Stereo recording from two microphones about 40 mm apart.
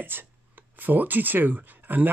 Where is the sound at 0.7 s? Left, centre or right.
Right.